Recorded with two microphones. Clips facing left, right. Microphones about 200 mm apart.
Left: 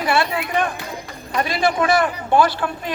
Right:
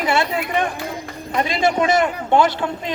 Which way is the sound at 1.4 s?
20° right (ahead or behind).